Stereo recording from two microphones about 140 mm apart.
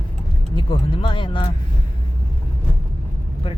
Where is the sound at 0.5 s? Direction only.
35° left (ahead or behind).